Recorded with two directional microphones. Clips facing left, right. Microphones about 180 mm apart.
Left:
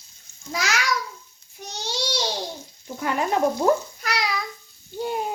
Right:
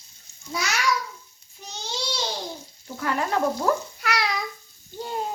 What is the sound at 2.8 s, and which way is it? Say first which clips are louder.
Speech: left 2 dB; 20° left (ahead or behind).